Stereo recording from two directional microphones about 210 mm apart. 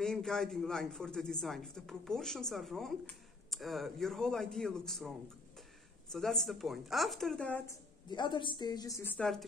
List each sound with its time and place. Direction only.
0.0 s speech: centre (ahead or behind)
6.1 s speech: centre (ahead or behind)
8.1 s a woman's voice: 20° left (ahead or behind); by 9.4 s 5° left (ahead or behind)